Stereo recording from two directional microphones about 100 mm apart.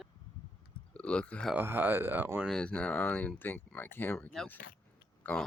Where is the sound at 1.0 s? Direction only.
10° left (ahead or behind).